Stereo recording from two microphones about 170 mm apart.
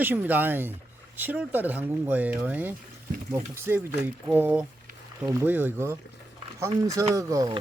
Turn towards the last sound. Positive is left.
turn(degrees=-20)  # may be behind; listen again after turning